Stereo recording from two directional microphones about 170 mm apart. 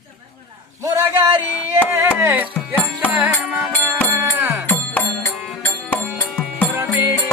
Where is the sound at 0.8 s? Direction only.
20° right (ahead or behind).